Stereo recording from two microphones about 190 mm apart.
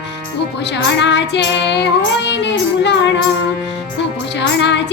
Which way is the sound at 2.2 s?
65° left (ahead or behind).